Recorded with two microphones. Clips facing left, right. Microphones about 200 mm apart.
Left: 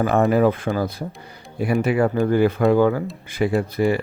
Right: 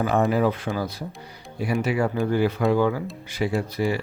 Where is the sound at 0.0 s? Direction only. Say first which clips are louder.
Left 4 dB; 55° left (ahead or behind).